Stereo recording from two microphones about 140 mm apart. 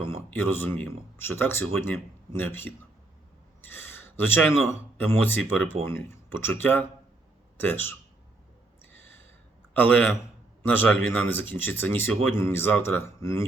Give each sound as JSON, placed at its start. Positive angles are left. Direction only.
{"t": 0.1, "sound": "speech", "side_deg": 15}
{"t": 8.8, "sound": "a sound", "side_deg": 15}
{"t": 9.7, "sound": "speech", "side_deg": 15}